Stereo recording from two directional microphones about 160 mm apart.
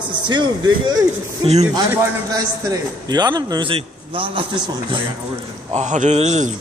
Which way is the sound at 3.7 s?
35° right (ahead or behind).